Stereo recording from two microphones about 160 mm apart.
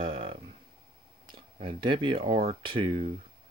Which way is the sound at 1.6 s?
30° right (ahead or behind).